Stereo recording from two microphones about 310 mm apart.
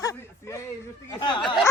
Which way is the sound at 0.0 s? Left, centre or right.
Centre.